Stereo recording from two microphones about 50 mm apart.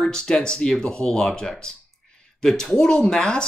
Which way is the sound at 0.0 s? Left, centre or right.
Centre.